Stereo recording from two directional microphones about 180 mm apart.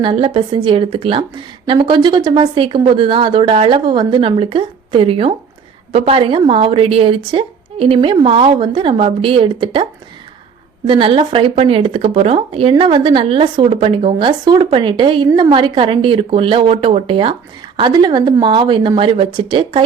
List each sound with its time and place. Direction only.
0.0 s a woman's voice: 30° right (ahead or behind)
10.8 s a woman's voice: 30° right (ahead or behind)